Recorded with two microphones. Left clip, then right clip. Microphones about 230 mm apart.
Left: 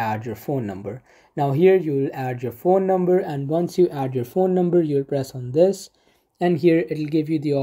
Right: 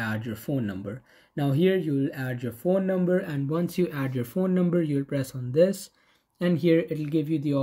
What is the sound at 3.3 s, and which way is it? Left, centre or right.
Speech, centre.